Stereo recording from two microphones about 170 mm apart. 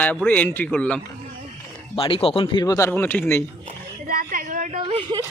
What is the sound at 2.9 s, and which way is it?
Speech, 10° left (ahead or behind).